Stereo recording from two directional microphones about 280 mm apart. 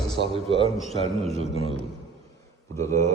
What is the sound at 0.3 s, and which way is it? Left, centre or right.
A man's voice, centre.